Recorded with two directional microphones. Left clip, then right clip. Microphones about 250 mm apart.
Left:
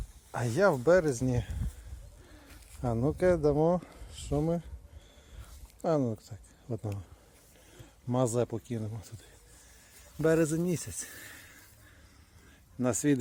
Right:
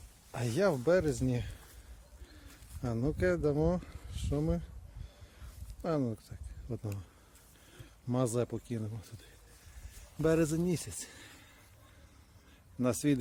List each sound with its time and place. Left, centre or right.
0.3 s speech: centre
2.8 s speech: centre
5.8 s speech: centre
10.2 s a man's voice: centre
12.8 s speech: centre